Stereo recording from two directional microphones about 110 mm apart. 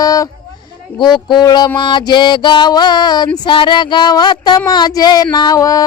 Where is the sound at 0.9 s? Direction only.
45° left (ahead or behind).